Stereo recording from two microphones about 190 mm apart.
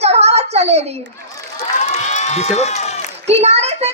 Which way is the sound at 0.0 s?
35° right (ahead or behind).